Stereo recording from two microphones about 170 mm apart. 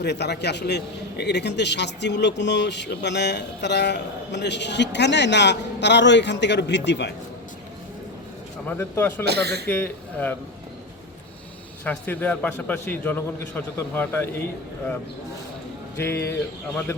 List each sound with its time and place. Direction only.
0.0 s a man's voice: 80° left
8.6 s a man's voice: 10° left (ahead or behind)
9.2 s speech: 75° right (ahead or behind)
9.6 s a man's voice: 10° left (ahead or behind)
11.9 s a man's voice: 10° left (ahead or behind)
16.0 s a man's voice: 15° left (ahead or behind)